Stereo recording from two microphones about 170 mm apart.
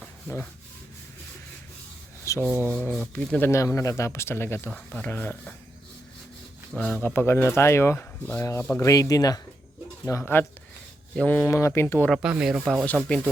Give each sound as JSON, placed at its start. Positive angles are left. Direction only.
{"t": 0.0, "sound": "rub", "side_deg": 10}
{"t": 2.2, "sound": "rub", "side_deg": 15}
{"t": 2.9, "sound": "speech", "side_deg": 5}
{"t": 6.7, "sound": "speech", "side_deg": 10}
{"t": 12.1, "sound": "speech", "side_deg": -5}
{"t": 12.8, "sound": "speech", "side_deg": 10}